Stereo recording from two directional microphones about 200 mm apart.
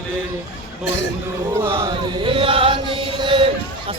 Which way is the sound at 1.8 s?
20° right (ahead or behind).